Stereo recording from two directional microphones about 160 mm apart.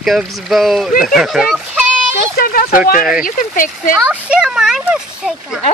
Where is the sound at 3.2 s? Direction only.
60° left (ahead or behind).